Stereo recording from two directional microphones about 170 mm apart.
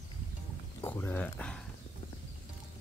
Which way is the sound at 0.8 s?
10° left (ahead or behind).